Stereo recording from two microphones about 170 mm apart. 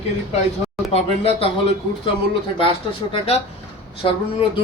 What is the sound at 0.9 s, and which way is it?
A man's voice, 35° left (ahead or behind).